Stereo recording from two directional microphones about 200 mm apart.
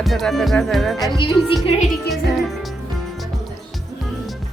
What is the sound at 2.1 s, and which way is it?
Speech, centre (ahead or behind).